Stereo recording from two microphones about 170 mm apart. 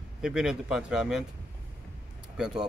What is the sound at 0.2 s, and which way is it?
Speech, 5° right (ahead or behind).